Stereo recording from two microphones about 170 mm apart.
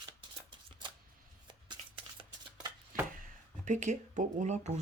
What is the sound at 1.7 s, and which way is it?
Shuffling cards, 30° right (ahead or behind).